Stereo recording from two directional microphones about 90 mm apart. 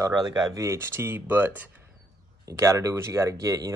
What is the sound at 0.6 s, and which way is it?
Speech, 30° right (ahead or behind).